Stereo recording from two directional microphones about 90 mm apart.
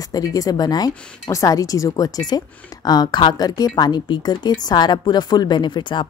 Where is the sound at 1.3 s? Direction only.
40° left (ahead or behind).